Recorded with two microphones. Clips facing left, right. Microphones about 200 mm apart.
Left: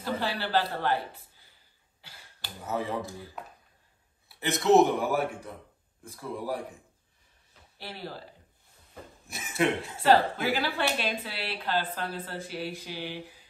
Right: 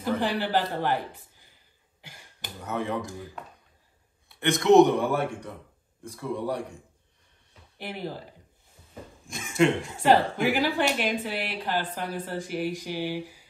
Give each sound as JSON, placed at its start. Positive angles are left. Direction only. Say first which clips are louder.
{"t": 0.4, "sound": "a man's voice", "louder": "right 2 dB", "side_deg": -15}
{"t": 2.0, "sound": "a sound", "louder": "right 4 dB", "side_deg": -15}
{"t": 2.6, "sound": "a man's voice", "louder": "right 1 dB", "side_deg": 5}
{"t": 4.3, "sound": "a man's voice", "louder": "right 3 dB", "side_deg": 5}
{"t": 7.7, "sound": "speech", "louder": "right 5 dB", "side_deg": -15}
{"t": 9.3, "sound": "a man's voice", "louder": "right 4 dB", "side_deg": 5}
{"t": 9.9, "sound": "a woman's voice", "louder": "even", "side_deg": -15}